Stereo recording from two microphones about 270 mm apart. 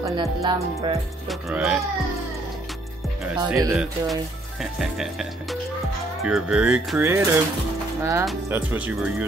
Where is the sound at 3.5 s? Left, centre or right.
Centre.